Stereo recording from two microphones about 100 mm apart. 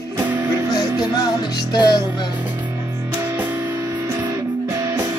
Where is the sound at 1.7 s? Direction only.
45° left (ahead or behind).